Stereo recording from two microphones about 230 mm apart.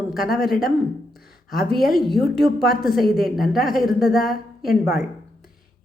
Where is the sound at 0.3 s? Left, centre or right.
Centre.